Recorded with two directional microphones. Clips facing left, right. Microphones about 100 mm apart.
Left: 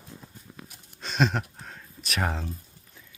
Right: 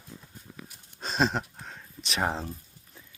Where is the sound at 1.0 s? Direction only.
35° right (ahead or behind).